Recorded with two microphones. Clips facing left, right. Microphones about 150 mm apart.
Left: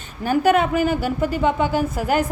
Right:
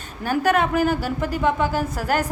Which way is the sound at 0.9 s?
45° right (ahead or behind).